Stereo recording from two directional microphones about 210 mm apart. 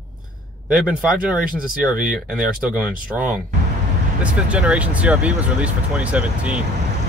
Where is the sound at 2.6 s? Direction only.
5° right (ahead or behind).